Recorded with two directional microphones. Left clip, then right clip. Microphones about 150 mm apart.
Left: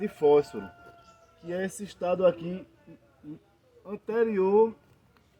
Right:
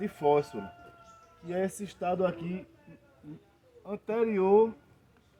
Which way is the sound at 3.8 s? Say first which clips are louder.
Left 3 dB; 5° right (ahead or behind).